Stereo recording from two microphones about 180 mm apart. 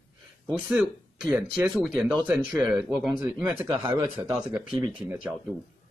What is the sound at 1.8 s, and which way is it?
Speech, centre (ahead or behind).